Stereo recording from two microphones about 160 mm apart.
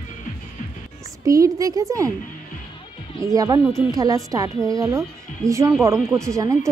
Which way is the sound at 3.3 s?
20° right (ahead or behind).